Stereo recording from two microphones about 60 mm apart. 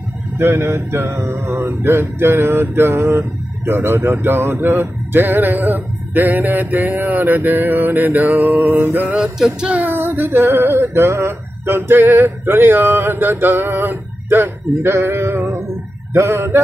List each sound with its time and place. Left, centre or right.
0.4 s mantra: right
9.1 s music: centre
9.8 s mantra: right
12.0 s a sound: right
16.1 s mantra: right